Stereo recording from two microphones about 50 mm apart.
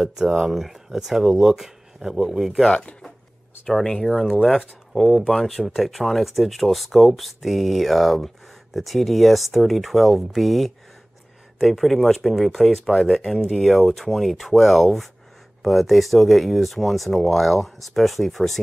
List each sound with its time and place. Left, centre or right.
0.0 s speech: centre
2.7 s speech: left
3.6 s speech: centre